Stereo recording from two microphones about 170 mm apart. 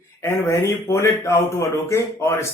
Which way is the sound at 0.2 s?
15° left (ahead or behind).